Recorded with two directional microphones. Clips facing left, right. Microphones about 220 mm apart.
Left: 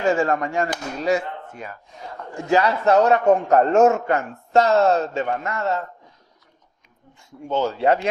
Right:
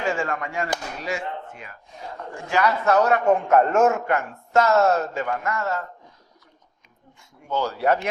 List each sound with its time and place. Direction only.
0.2 s a man's voice: 40° left (ahead or behind); by 3.2 s 25° left (ahead or behind)
3.2 s a man's voice: 35° left (ahead or behind)
7.4 s a man's voice: 20° left (ahead or behind)